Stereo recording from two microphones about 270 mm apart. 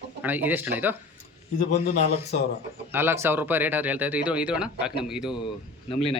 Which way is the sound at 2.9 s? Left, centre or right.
Centre.